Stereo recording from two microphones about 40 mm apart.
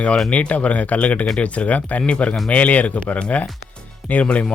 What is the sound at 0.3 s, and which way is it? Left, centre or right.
Speech, left.